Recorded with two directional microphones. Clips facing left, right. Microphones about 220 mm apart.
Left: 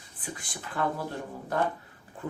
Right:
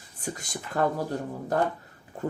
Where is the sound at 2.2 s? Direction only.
40° right (ahead or behind).